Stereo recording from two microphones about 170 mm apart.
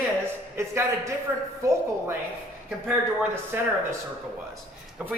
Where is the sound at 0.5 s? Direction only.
15° right (ahead or behind).